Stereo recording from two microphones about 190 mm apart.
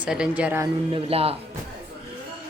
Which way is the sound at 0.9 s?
30° right (ahead or behind).